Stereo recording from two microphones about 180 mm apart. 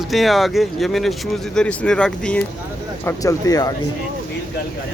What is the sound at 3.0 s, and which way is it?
Speech, 20° left (ahead or behind).